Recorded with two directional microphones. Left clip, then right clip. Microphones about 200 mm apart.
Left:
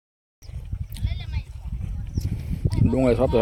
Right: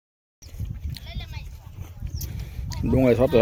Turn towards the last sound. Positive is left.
turn(degrees=-5)  # may be behind; listen again after turning